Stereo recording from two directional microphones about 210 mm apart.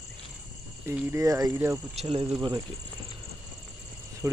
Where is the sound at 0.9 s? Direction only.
15° right (ahead or behind).